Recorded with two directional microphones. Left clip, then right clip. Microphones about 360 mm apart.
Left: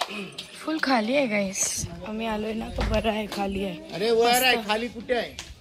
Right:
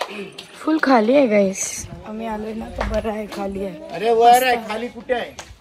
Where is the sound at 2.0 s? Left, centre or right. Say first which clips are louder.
Right 2 dB; centre.